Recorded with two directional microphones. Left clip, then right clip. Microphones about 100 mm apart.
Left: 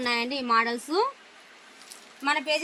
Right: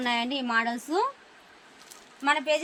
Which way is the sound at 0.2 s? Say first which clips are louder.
Left 3 dB; 85° right.